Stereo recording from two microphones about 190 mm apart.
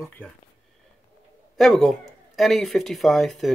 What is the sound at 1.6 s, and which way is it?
Speech, centre (ahead or behind).